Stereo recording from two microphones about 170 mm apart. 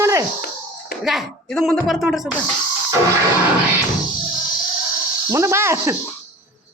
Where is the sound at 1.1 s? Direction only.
Centre (ahead or behind).